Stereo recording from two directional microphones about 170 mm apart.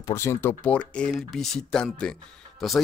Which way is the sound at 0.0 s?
15° left (ahead or behind).